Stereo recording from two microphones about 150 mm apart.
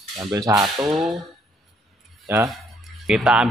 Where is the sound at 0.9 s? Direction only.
Centre (ahead or behind).